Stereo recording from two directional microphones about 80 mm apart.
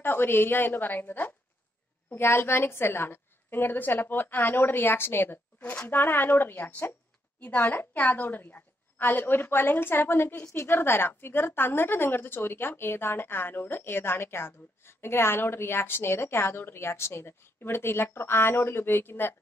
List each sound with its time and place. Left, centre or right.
0.0 s a woman's voice: left
5.6 s a woman's voice: centre
10.5 s a woman's voice: left